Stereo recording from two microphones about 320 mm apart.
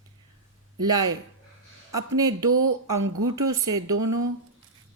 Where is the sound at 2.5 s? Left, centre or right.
Right.